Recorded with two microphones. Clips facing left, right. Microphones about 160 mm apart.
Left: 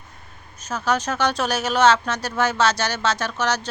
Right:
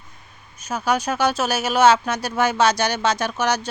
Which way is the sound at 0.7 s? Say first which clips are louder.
Right 1 dB; 10° right (ahead or behind).